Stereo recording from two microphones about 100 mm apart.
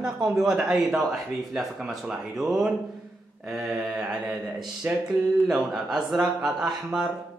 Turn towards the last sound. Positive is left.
turn(degrees=-5)  # may be behind; listen again after turning